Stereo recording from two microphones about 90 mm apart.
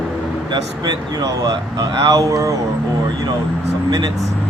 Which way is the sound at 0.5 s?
50° right (ahead or behind).